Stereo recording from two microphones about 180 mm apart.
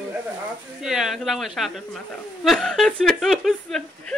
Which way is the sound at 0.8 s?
Centre (ahead or behind).